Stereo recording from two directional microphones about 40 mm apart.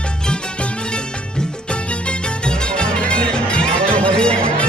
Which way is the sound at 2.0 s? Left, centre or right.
Left.